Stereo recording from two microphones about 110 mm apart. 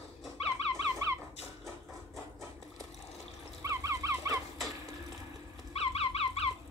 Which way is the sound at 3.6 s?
30° right (ahead or behind).